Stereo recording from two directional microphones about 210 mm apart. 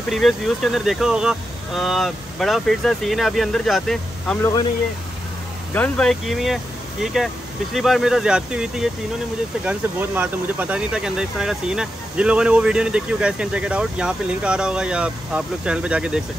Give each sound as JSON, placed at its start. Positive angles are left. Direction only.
{"t": 0.1, "sound": "speech", "side_deg": 0}
{"t": 4.4, "sound": "speech", "side_deg": 20}
{"t": 5.7, "sound": "speech", "side_deg": 5}